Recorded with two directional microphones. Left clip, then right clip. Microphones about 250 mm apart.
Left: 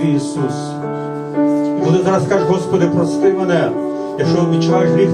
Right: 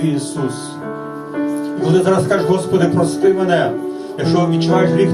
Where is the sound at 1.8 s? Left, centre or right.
Right.